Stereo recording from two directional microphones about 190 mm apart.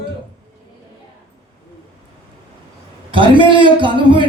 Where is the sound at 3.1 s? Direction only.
25° right (ahead or behind).